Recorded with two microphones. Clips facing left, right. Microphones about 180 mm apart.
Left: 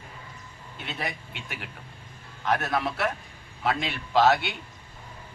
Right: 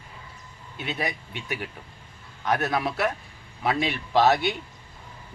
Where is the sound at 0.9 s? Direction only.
15° right (ahead or behind).